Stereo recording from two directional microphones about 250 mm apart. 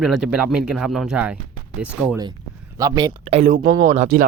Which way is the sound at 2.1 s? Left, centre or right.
Centre.